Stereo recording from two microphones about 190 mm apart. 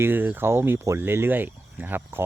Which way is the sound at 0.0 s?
10° right (ahead or behind).